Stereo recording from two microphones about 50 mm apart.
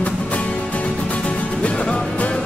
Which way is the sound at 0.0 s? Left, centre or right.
Left.